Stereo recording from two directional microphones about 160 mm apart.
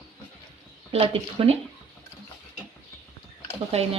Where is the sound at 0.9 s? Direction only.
35° right (ahead or behind).